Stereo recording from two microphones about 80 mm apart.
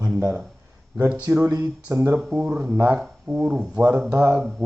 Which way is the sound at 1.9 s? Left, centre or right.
Right.